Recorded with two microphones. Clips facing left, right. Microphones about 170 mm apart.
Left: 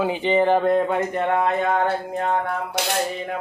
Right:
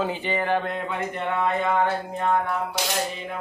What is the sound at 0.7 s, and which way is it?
Speech, 50° left (ahead or behind).